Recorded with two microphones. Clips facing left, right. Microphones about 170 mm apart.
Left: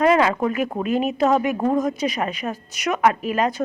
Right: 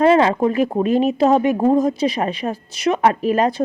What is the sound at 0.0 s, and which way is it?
Speech, 30° right (ahead or behind).